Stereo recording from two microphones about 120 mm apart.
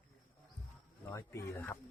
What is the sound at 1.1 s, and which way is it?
Speech, 25° left (ahead or behind).